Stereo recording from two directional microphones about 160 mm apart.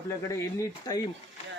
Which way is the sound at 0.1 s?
20° left (ahead or behind).